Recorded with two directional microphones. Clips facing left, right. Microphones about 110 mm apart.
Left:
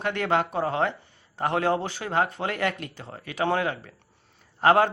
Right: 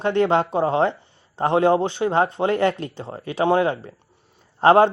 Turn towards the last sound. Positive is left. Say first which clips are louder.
# right 5 dB
turn(degrees=-30)  # may be behind; listen again after turning